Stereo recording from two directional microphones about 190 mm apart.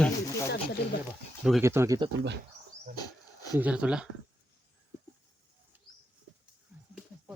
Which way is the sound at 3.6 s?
5° right (ahead or behind).